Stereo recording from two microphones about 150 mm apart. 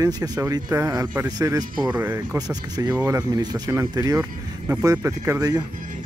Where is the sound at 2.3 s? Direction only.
25° right (ahead or behind).